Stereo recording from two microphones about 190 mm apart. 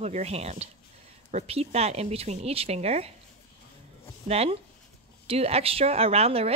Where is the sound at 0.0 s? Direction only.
35° right (ahead or behind).